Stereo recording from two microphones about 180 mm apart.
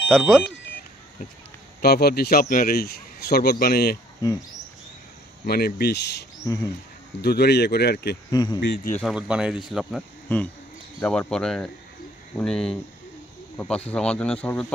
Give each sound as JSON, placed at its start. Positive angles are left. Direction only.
{"t": 0.1, "sound": "speech", "side_deg": 0}
{"t": 1.8, "sound": "a man's voice", "side_deg": 60}
{"t": 4.2, "sound": "speech", "side_deg": 20}
{"t": 5.4, "sound": "a man's voice", "side_deg": 55}
{"t": 6.5, "sound": "speech", "side_deg": 15}
{"t": 7.2, "sound": "a man's voice", "side_deg": 65}
{"t": 8.3, "sound": "speech", "side_deg": 25}
{"t": 8.5, "sound": "a man's voice", "side_deg": 65}
{"t": 9.0, "sound": "speech", "side_deg": -5}